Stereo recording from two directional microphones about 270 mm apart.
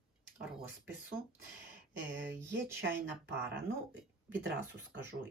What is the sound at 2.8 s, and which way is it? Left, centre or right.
Speech, right.